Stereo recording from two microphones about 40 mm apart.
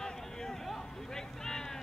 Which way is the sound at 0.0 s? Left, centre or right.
Centre.